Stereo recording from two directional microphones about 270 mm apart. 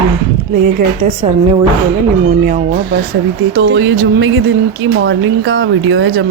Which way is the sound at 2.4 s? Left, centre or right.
Right.